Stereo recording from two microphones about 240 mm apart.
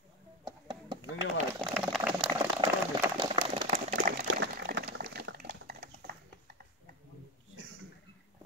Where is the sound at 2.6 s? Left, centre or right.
Centre.